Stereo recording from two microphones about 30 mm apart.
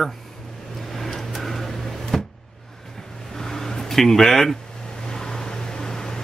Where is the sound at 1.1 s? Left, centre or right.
Centre.